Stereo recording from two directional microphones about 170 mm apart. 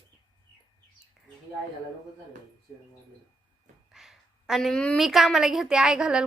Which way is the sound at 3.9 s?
Centre (ahead or behind).